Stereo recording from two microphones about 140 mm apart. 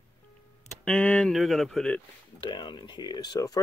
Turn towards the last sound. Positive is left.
turn(degrees=25)  # may be behind; listen again after turning